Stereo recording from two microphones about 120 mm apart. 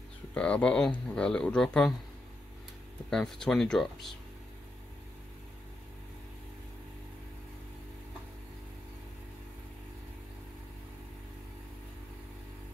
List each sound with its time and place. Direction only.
0.3 s speech: 10° left (ahead or behind)
3.1 s speech: 5° left (ahead or behind)